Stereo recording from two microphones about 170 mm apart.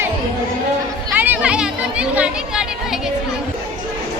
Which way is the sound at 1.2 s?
10° right (ahead or behind).